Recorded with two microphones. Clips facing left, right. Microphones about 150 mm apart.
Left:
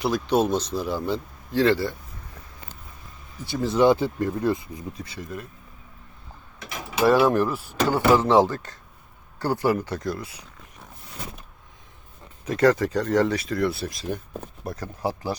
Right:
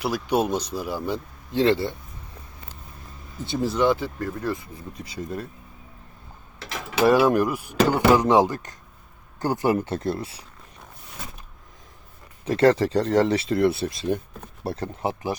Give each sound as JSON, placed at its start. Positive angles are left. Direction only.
{"t": 0.0, "sound": "speech", "side_deg": -10}
{"t": 1.5, "sound": "speech", "side_deg": -20}
{"t": 3.4, "sound": "speech", "side_deg": -20}
{"t": 3.8, "sound": "speech", "side_deg": 20}
{"t": 7.0, "sound": "speech", "side_deg": -15}
{"t": 12.5, "sound": "speech", "side_deg": -30}